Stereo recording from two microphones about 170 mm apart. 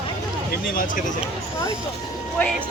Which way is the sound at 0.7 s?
50° left (ahead or behind).